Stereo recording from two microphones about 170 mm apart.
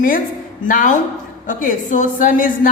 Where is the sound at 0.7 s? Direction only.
50° left (ahead or behind).